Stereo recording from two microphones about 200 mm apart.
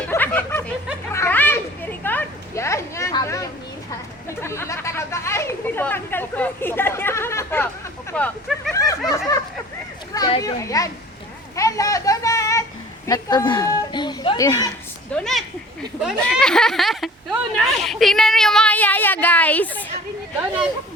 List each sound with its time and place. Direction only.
0.1 s snicker: 10° left (ahead or behind)
1.1 s a sound: 10° left (ahead or behind)
4.3 s speech: 15° left (ahead or behind)
8.1 s vehicle: 5° left (ahead or behind)
8.7 s snicker: 15° left (ahead or behind)
10.2 s speech: 20° left (ahead or behind)
11.5 s a sound: 15° left (ahead or behind)
13.1 s speech: 15° left (ahead or behind)
15.1 s a woman's voice: centre (ahead or behind)